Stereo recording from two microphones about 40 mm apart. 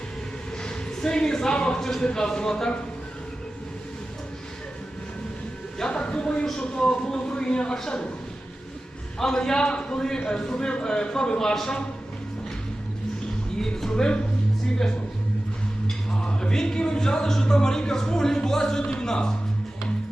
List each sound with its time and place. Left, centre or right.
0.6 s speech: centre
5.9 s a sound: left
6.6 s a man's voice: left
9.1 s a man's voice: centre
13.6 s music: centre
16.1 s speech: left